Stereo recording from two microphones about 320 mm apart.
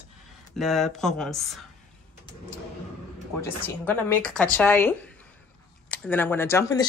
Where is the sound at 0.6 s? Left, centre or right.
Centre.